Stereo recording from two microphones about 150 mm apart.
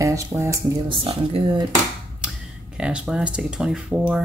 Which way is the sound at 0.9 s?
35° right (ahead or behind).